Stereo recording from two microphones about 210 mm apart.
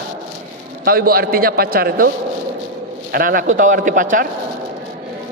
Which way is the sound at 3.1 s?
45° right (ahead or behind).